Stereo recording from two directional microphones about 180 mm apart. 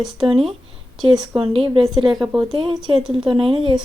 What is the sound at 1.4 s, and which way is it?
Speech, 30° right (ahead or behind).